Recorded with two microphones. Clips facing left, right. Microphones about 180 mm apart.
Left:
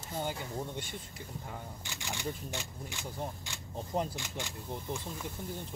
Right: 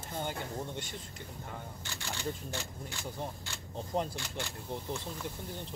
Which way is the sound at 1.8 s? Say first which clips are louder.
Right 1 dB; 15° left (ahead or behind).